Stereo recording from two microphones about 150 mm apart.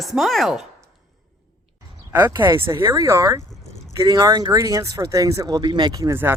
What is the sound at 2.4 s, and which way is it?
Speech, 15° right (ahead or behind).